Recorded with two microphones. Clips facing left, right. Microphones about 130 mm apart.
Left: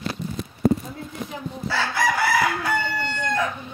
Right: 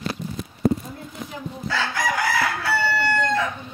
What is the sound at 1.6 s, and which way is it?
Chicken, 10° left (ahead or behind).